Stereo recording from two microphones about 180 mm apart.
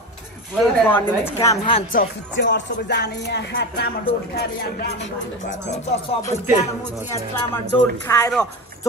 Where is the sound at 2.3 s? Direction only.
80° left.